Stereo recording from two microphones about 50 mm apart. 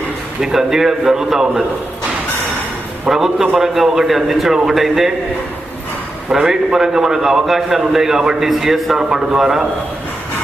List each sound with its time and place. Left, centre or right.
0.4 s a man's voice: centre
3.1 s a man's voice: centre
6.3 s a man's voice: centre